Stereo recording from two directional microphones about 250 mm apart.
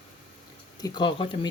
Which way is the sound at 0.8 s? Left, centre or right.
Centre.